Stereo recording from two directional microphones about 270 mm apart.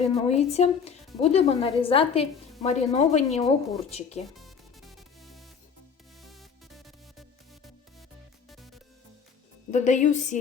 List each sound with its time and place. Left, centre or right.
0.0 s speech: left
4.4 s music: centre
8.4 s music: centre
9.7 s speech: left